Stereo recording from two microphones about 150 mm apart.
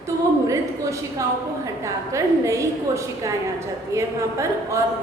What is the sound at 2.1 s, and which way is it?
A woman's voice, 20° right (ahead or behind).